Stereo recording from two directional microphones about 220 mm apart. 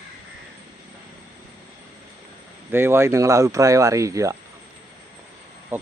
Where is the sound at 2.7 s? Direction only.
10° right (ahead or behind).